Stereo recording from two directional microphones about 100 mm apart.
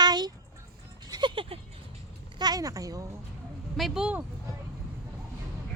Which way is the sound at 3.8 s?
5° right (ahead or behind).